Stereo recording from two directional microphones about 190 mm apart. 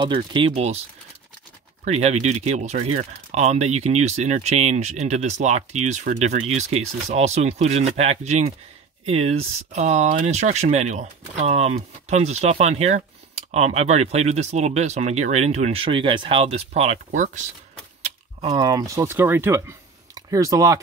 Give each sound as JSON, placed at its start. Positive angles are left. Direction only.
{"t": 0.0, "sound": "speech", "side_deg": -25}
{"t": 1.9, "sound": "speech", "side_deg": -35}
{"t": 18.5, "sound": "speech", "side_deg": -20}